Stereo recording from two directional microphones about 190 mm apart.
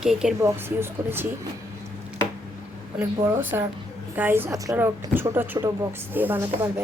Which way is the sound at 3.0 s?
15° right (ahead or behind).